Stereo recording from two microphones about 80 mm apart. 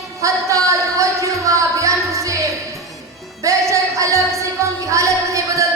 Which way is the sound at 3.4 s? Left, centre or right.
Right.